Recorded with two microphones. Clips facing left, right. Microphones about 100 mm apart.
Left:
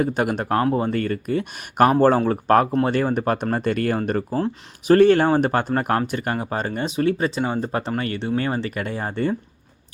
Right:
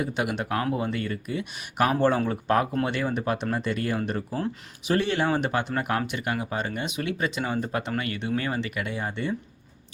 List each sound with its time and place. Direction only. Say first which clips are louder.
0.0 s speech: left 6 dB; 45° left (ahead or behind)